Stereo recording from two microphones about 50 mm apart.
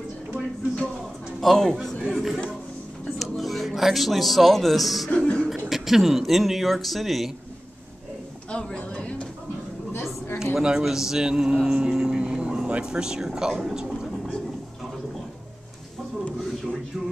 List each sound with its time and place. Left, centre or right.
1.4 s a man's voice: centre
2.0 s speech: centre
5.1 s cough: centre
5.7 s speech: centre
8.7 s a sound: left
10.4 s a man's voice: centre